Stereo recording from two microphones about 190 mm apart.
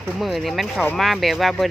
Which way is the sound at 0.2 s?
Centre (ahead or behind).